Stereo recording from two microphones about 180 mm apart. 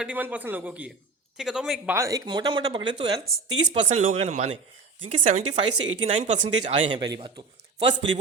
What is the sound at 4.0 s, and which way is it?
A man's voice, 40° right (ahead or behind).